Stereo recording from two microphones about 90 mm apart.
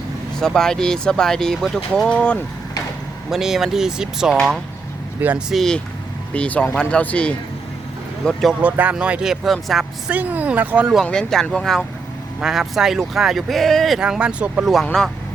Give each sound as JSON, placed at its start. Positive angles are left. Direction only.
{"t": 0.3, "sound": "speech", "side_deg": 5}
{"t": 3.2, "sound": "speech", "side_deg": -5}
{"t": 8.6, "sound": "speech", "side_deg": -15}
{"t": 10.1, "sound": "speech", "side_deg": -15}
{"t": 11.0, "sound": "speech", "side_deg": 10}
{"t": 14.6, "sound": "speech", "side_deg": 0}